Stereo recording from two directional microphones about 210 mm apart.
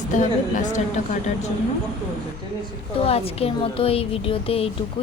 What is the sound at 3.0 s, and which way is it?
A woman's voice, 30° left (ahead or behind).